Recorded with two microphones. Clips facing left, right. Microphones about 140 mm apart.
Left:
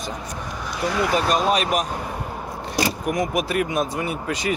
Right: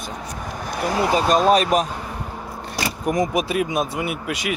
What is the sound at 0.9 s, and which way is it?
Speech, 25° right (ahead or behind).